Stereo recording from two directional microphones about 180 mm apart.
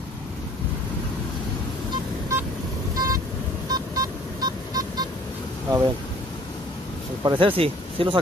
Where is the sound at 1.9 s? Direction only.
15° right (ahead or behind).